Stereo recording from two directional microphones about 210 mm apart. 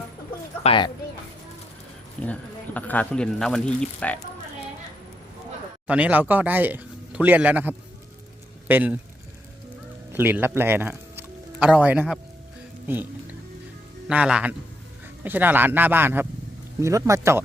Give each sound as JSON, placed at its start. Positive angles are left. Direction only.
{"t": 0.6, "sound": "speech", "side_deg": 25}
{"t": 2.2, "sound": "speech", "side_deg": 5}
{"t": 5.9, "sound": "speech", "side_deg": -5}
{"t": 10.1, "sound": "speech", "side_deg": -10}
{"t": 14.1, "sound": "speech", "side_deg": -5}